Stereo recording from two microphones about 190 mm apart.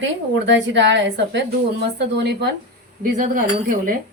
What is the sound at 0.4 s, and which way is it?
A woman's voice, 70° right (ahead or behind).